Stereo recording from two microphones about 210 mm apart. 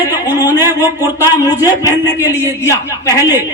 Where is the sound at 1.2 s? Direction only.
15° left (ahead or behind).